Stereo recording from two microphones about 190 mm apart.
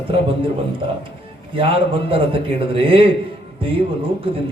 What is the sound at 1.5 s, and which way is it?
Music, 30° right (ahead or behind).